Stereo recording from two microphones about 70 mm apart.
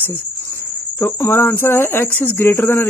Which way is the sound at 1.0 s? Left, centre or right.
Left.